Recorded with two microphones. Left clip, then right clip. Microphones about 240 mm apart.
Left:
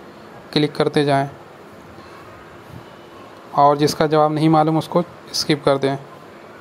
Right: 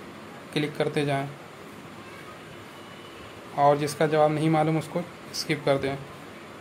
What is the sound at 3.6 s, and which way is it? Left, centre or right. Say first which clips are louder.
Speech: left 7 dB; left.